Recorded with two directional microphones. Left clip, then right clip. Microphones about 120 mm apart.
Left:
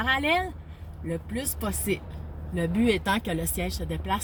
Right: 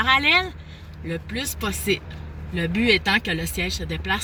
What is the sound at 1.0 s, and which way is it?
Speech, 45° left (ahead or behind).